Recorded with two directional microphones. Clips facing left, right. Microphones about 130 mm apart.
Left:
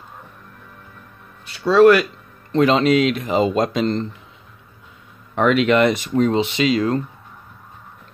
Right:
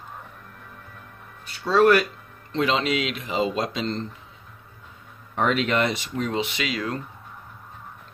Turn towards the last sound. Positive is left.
turn(degrees=30)  # may be behind; listen again after turning